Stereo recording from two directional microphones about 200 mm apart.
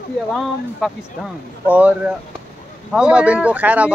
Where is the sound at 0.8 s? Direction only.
Centre (ahead or behind).